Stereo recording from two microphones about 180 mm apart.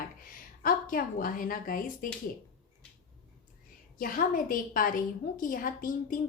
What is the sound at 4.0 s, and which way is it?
A woman's voice, 50° left (ahead or behind).